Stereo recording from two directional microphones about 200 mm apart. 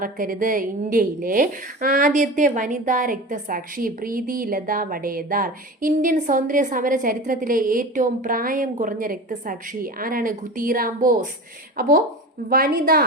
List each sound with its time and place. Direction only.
0.0 s a woman's voice: 45° right (ahead or behind)